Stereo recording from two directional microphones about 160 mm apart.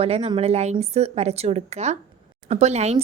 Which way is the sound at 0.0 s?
40° right (ahead or behind).